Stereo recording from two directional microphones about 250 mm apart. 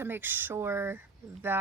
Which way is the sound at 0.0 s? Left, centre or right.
Centre.